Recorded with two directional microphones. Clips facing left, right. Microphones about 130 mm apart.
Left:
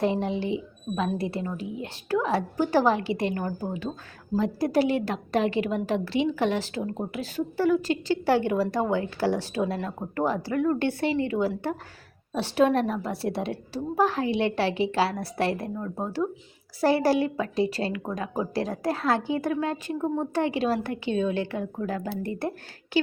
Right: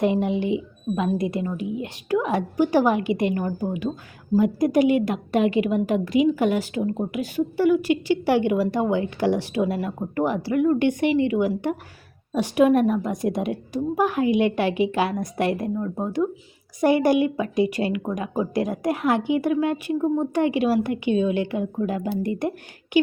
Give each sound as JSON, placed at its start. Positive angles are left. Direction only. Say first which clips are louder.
{"t": 0.0, "sound": "a woman's voice", "louder": "right 4 dB", "side_deg": -15}
{"t": 4.6, "sound": "a woman's voice", "louder": "right 3 dB", "side_deg": 35}
{"t": 5.0, "sound": "a woman's voice", "louder": "right 4 dB", "side_deg": -10}
{"t": 5.9, "sound": "a woman's voice", "louder": "right 5 dB", "side_deg": 35}
{"t": 6.3, "sound": "a woman's voice", "louder": "right 4 dB", "side_deg": -10}